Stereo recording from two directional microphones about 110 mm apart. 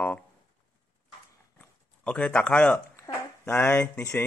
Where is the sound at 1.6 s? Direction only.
10° left (ahead or behind).